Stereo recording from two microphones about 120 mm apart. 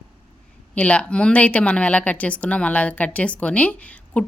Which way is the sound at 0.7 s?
10° left (ahead or behind).